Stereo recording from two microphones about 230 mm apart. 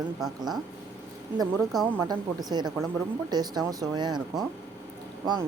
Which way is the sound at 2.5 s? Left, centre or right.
Centre.